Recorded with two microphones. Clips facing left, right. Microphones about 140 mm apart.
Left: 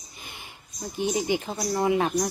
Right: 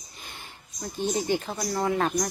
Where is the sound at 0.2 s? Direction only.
15° left (ahead or behind).